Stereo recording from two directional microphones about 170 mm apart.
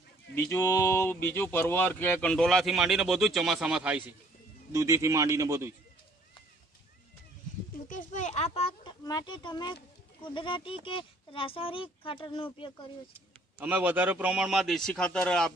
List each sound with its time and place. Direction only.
0.3 s a sound: 15° left (ahead or behind)
1.3 s speech: 15° left (ahead or behind); by 4.0 s 5° right (ahead or behind)
4.7 s a man's voice: 15° right (ahead or behind)
7.9 s a child's voice: 50° left (ahead or behind)
9.0 s speech: 25° left (ahead or behind)
13.6 s a man's voice: 10° right (ahead or behind); by 15.5 s 5° left (ahead or behind)